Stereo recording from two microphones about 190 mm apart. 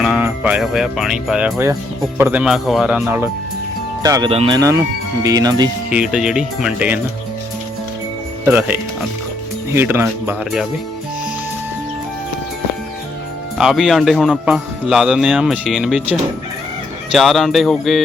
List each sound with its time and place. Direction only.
0.0 s speech: 5° right (ahead or behind)
3.0 s speech: 15° right (ahead or behind)
5.9 s speech: 5° right (ahead or behind)
8.4 s speech: 10° right (ahead or behind)
13.6 s speech: 5° right (ahead or behind)